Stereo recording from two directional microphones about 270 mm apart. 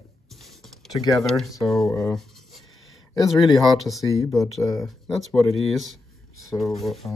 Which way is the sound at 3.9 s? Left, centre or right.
Centre.